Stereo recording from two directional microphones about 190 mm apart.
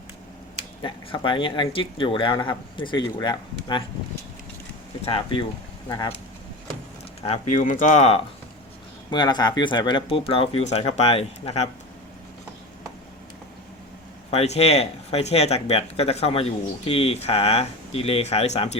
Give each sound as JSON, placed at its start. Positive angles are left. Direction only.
{"t": 0.8, "sound": "speech", "side_deg": 25}
{"t": 5.0, "sound": "speech", "side_deg": 25}
{"t": 7.2, "sound": "speech", "side_deg": 35}
{"t": 9.0, "sound": "speech", "side_deg": 20}
{"t": 14.3, "sound": "speech", "side_deg": 35}